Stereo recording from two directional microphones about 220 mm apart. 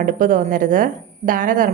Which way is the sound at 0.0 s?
35° right (ahead or behind).